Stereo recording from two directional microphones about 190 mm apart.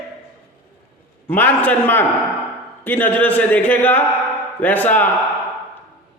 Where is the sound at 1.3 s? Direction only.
10° left (ahead or behind).